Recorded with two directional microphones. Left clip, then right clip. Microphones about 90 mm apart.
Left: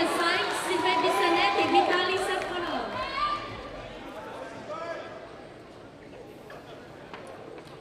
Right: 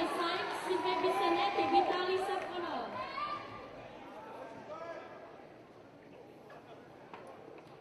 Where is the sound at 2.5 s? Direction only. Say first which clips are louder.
Left 8 dB; 20° left (ahead or behind).